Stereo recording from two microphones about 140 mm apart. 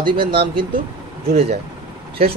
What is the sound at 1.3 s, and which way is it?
Speech, 50° right (ahead or behind).